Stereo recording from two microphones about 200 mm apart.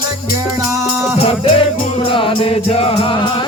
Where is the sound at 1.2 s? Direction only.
30° left (ahead or behind).